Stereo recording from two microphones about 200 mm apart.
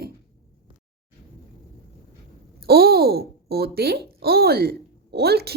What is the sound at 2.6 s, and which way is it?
A woman's voice, 50° right (ahead or behind).